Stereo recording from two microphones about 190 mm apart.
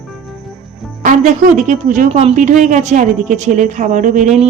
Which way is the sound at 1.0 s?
45° right (ahead or behind).